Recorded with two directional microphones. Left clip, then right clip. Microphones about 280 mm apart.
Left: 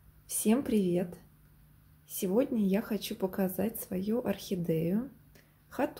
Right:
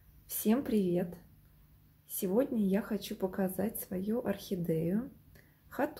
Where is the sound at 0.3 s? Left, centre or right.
Centre.